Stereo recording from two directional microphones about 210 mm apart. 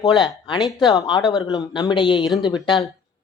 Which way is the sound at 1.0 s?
20° left (ahead or behind).